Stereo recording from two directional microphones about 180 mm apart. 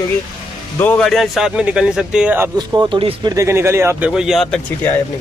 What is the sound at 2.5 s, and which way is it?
Speech, 25° right (ahead or behind).